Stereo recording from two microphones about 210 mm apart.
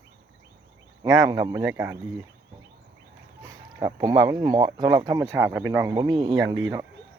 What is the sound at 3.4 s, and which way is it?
Speech, 15° right (ahead or behind).